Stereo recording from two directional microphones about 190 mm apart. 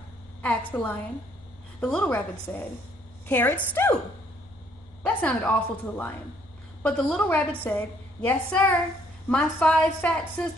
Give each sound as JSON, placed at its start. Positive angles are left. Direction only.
{"t": 0.4, "sound": "a woman's voice", "side_deg": 5}
{"t": 5.0, "sound": "a woman's voice", "side_deg": 10}